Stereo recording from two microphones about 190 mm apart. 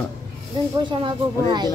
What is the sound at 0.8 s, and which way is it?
Speech, 25° right (ahead or behind).